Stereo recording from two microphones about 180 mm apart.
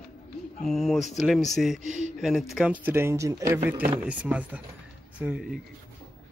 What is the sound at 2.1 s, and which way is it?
Speech, centre (ahead or behind).